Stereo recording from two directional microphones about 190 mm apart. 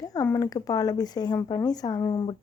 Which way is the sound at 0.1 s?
15° left (ahead or behind).